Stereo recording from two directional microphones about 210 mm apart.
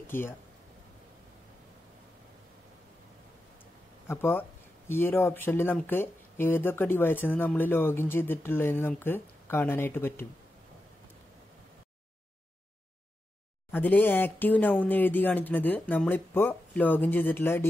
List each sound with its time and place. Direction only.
0.0 s speech: 10° left (ahead or behind)
4.1 s speech: 10° left (ahead or behind)
13.7 s speech: 10° left (ahead or behind)